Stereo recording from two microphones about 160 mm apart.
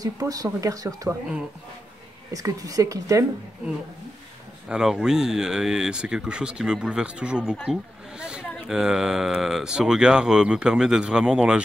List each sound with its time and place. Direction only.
0.0 s speech: 20° right (ahead or behind)
2.3 s speech: 20° right (ahead or behind)
4.6 s speech: 5° right (ahead or behind)
7.5 s speech: 5° left (ahead or behind)
8.2 s speech: 5° right (ahead or behind)